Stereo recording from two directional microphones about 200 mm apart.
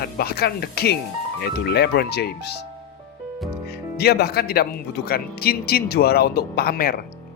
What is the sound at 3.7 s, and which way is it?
Speech, 55° left (ahead or behind).